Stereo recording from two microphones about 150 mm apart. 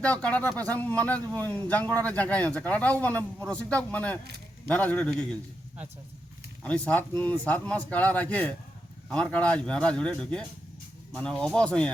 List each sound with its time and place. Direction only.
0.0 s speech: 10° left (ahead or behind)
4.2 s a sound: 90° right
4.7 s speech: 10° left (ahead or behind)
6.6 s speech: 10° left (ahead or behind)